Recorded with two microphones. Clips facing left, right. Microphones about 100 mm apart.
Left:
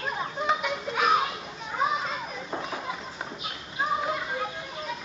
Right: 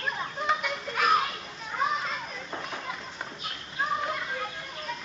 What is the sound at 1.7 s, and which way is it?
Children playing, 5° left (ahead or behind).